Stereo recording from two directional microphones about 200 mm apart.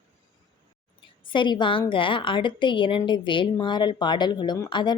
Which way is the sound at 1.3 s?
25° left (ahead or behind).